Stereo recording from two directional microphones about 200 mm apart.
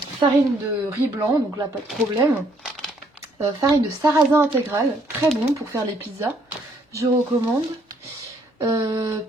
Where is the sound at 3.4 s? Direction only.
15° right (ahead or behind).